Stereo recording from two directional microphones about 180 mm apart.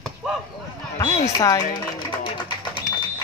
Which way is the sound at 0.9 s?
20° left (ahead or behind).